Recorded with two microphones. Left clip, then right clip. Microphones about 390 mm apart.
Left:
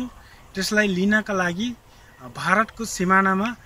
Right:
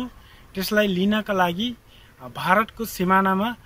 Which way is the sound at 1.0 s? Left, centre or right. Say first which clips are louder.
Even; centre.